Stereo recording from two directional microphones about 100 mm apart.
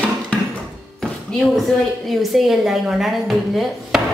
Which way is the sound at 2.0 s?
Centre (ahead or behind).